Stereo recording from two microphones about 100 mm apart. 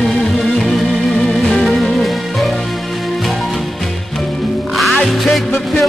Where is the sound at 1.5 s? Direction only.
5° left (ahead or behind).